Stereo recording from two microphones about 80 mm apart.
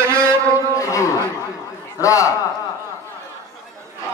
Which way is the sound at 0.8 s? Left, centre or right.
Left.